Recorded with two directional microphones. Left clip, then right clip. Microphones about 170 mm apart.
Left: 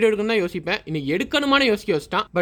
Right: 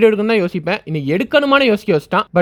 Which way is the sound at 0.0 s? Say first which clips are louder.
Right 6 dB; 30° right (ahead or behind).